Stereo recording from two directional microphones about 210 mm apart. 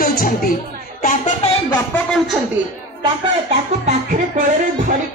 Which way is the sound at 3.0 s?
30° right (ahead or behind).